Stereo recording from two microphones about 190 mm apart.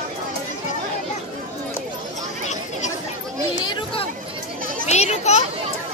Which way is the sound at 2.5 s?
40° left (ahead or behind).